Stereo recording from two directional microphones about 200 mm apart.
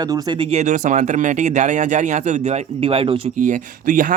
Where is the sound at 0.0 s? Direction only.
20° right (ahead or behind).